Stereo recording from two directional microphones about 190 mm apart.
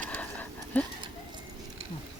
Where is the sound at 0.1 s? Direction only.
10° left (ahead or behind).